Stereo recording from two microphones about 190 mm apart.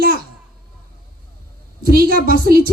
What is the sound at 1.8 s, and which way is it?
Speech, 50° right (ahead or behind).